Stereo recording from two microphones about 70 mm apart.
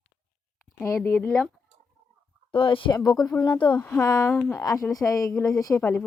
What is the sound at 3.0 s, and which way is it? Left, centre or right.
Speech, left.